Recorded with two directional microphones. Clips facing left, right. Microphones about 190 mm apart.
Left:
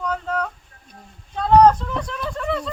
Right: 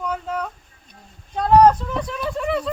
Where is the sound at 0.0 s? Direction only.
5° right (ahead or behind).